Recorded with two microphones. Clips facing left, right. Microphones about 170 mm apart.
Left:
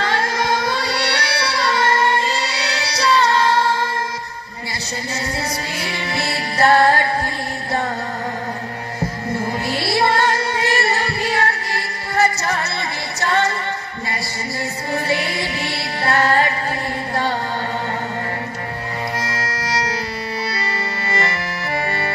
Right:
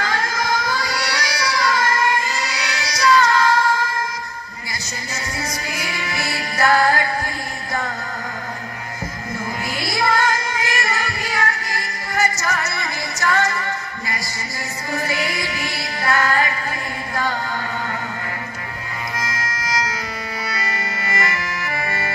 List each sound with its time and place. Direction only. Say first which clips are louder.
0.0 s music: left 3 dB; 30° left (ahead or behind)
5.8 s music: left 2 dB; 30° left (ahead or behind)
9.0 s music: left 6 dB; 30° left (ahead or behind)
14.9 s music: left 2 dB; 30° left (ahead or behind)
17.1 s chant: left 2 dB; 30° left (ahead or behind)
19.1 s music: left 3 dB; 35° left (ahead or behind)